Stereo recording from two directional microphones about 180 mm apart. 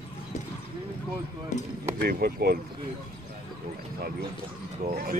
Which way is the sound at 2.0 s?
55° right (ahead or behind).